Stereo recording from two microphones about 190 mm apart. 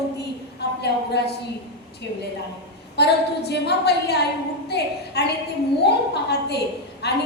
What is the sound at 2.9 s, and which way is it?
A woman's voice, 60° left (ahead or behind).